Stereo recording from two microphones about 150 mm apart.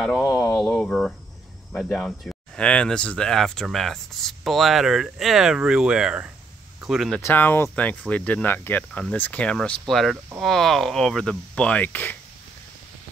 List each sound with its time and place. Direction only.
0.2 s speech: 25° left (ahead or behind)
0.6 s speech: 5° left (ahead or behind)
7.2 s speech: 15° left (ahead or behind)